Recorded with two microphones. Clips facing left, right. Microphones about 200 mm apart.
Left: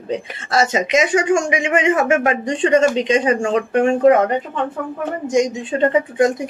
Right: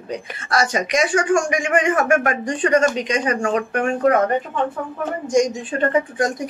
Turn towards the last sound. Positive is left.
turn(degrees=25)  # may be behind; listen again after turning